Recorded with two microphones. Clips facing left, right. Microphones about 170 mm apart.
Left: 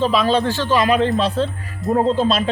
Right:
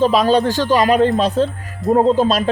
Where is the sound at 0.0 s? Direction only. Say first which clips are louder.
Right 3 dB; 40° right (ahead or behind).